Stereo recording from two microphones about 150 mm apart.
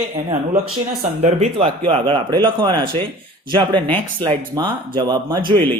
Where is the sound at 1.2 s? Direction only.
45° right (ahead or behind).